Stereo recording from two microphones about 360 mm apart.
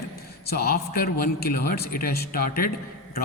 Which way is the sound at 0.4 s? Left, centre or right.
Left.